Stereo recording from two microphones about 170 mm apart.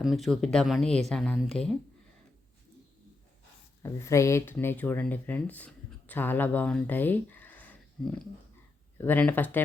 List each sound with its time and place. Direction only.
0.0 s speech: centre (ahead or behind)
3.8 s speech: 15° left (ahead or behind)